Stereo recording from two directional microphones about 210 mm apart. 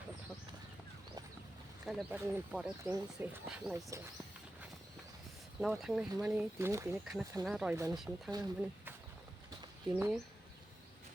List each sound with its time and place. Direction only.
1.8 s speech: centre (ahead or behind)
5.5 s speech: centre (ahead or behind)
7.0 s speech: centre (ahead or behind)
8.3 s speech: 20° right (ahead or behind)
9.6 s a sound: 10° right (ahead or behind)